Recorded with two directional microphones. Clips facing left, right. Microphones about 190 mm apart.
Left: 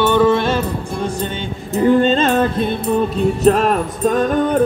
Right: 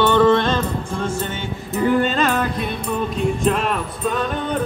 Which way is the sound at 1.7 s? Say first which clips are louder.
Left 5 dB; 25° left (ahead or behind).